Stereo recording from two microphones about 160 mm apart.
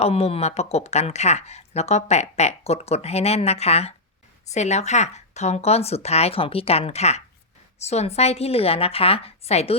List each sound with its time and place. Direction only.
0.0 s speech: 40° left (ahead or behind)